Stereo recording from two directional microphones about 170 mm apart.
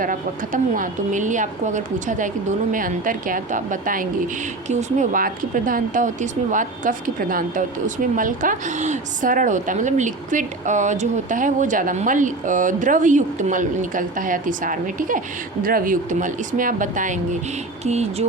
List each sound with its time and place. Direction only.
0.0 s a woman's voice: 50° right (ahead or behind)